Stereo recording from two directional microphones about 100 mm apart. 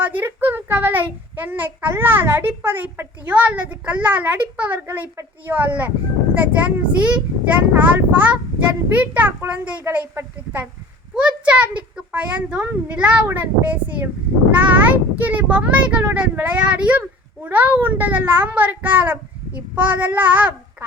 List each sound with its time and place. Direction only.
0.0 s a child's voice: 20° right (ahead or behind)